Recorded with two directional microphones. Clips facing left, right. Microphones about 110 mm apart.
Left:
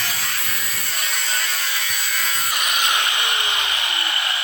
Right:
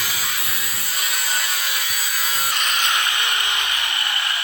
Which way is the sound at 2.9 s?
20° left (ahead or behind).